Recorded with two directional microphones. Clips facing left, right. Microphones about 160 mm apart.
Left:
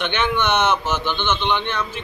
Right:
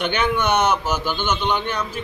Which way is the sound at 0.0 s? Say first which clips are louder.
Right 1 dB; 10° right (ahead or behind).